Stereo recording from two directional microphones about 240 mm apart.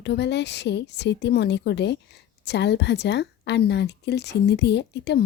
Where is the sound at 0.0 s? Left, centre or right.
Left.